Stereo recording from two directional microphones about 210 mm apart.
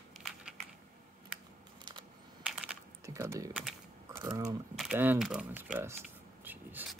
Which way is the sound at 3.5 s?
5° right (ahead or behind).